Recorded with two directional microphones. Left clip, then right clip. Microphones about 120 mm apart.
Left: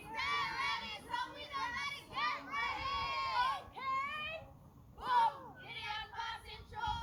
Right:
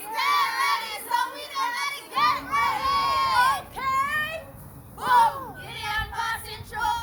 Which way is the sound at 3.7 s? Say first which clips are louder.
Right 14 dB; 10° left (ahead or behind).